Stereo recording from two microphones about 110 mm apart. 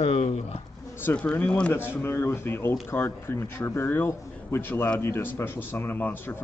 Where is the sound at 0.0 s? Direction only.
65° left (ahead or behind).